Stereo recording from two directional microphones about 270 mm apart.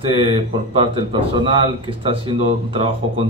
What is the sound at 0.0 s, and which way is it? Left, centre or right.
A man's voice, centre.